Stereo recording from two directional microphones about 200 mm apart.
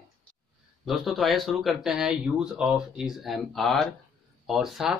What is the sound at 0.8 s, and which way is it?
Speech, centre (ahead or behind).